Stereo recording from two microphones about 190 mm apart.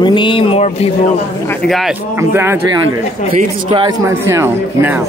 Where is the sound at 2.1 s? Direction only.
10° right (ahead or behind).